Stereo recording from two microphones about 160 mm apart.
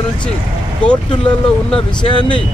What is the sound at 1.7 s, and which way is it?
Speech, 30° left (ahead or behind).